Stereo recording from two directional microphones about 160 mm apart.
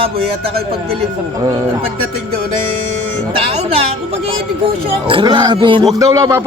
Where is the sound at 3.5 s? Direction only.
40° right (ahead or behind).